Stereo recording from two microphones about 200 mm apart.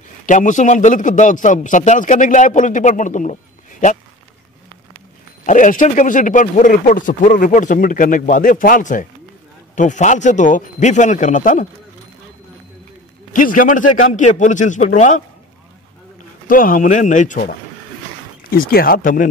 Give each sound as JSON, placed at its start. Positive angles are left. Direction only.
{"t": 0.3, "sound": "speech", "side_deg": 40}
{"t": 5.5, "sound": "speech", "side_deg": 40}
{"t": 13.3, "sound": "speech", "side_deg": 40}
{"t": 16.4, "sound": "speech", "side_deg": 45}